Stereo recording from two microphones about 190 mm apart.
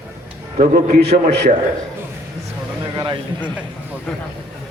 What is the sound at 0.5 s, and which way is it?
Speech, 50° right (ahead or behind).